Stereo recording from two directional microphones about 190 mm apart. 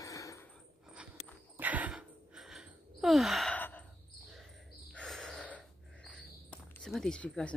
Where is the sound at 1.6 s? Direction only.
10° right (ahead or behind); by 3.8 s 10° left (ahead or behind).